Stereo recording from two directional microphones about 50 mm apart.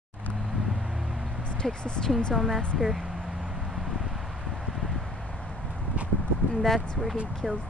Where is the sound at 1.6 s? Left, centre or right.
Centre.